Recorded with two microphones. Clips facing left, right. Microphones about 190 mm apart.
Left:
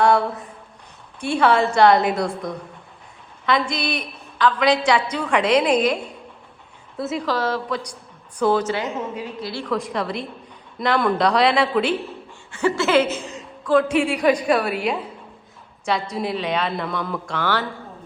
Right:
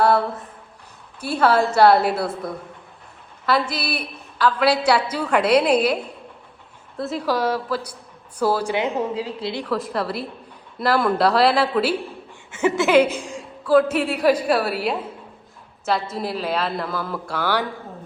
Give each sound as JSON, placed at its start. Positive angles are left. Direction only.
{"t": 0.0, "sound": "a woman's voice", "side_deg": -5}
{"t": 7.3, "sound": "a woman's voice", "side_deg": -10}
{"t": 8.9, "sound": "a woman's voice", "side_deg": -35}
{"t": 9.6, "sound": "a woman's voice", "side_deg": 0}
{"t": 12.5, "sound": "a woman's voice", "side_deg": -20}